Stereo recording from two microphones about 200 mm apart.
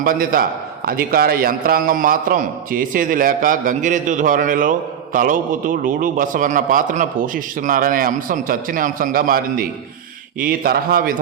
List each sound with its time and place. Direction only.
0.0 s a man's voice: 45° right (ahead or behind)